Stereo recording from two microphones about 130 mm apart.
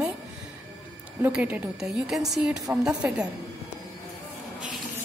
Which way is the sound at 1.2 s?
10° right (ahead or behind).